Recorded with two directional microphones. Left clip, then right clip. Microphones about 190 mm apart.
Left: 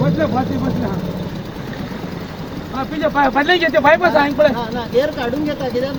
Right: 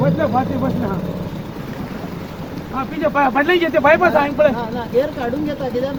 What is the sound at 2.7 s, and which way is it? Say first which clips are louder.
Speech: left 1 dB; 5° left (ahead or behind).